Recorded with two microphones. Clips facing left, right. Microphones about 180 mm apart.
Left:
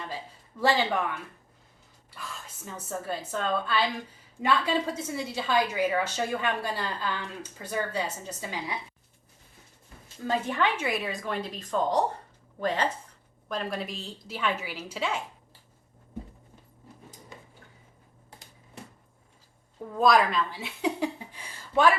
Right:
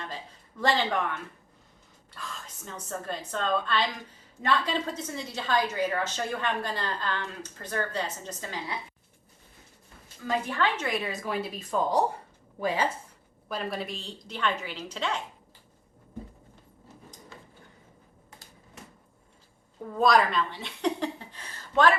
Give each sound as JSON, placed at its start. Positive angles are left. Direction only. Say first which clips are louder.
{"t": 0.6, "sound": "a woman's voice", "louder": "left 1 dB", "side_deg": 5}
{"t": 10.2, "sound": "a woman's voice", "louder": "left 1 dB", "side_deg": 20}
{"t": 10.8, "sound": "a woman's voice", "louder": "even", "side_deg": 5}
{"t": 17.3, "sound": "a sound", "louder": "left 2 dB", "side_deg": 15}
{"t": 19.9, "sound": "speech", "louder": "even", "side_deg": 0}